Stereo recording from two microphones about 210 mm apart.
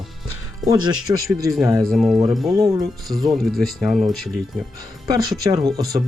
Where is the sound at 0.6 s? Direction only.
15° right (ahead or behind).